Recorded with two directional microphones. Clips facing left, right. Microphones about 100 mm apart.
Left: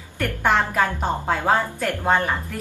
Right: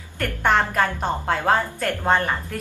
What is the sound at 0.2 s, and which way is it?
A woman's voice, 5° left (ahead or behind).